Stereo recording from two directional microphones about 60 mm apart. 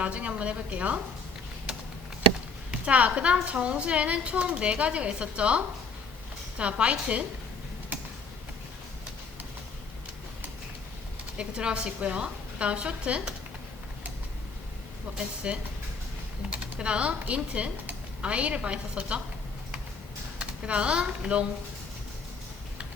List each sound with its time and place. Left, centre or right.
0.0 s a woman's voice: right
2.8 s a woman's voice: right
11.3 s a woman's voice: centre
15.4 s a woman's voice: centre
16.7 s a woman's voice: centre
20.4 s speech: centre